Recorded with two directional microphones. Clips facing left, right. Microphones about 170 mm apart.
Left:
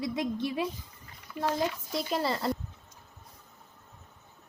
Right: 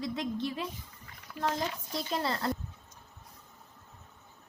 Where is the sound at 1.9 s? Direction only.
5° left (ahead or behind).